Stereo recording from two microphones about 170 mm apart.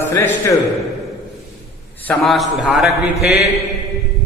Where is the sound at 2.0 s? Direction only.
5° left (ahead or behind).